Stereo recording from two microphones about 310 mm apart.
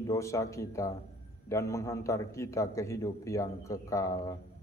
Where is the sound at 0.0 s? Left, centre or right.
Centre.